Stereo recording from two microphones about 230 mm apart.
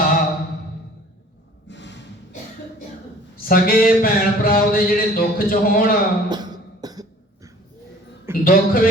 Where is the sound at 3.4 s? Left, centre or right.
Left.